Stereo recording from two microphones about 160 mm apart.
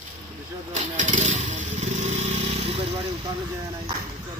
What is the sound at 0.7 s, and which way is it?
Motorcycle, 50° right (ahead or behind).